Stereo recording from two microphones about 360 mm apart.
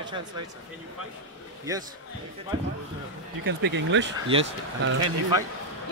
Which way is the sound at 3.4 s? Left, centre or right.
Right.